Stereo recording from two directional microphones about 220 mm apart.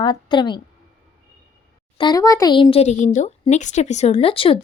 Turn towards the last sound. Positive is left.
turn(degrees=25)  # may be behind; listen again after turning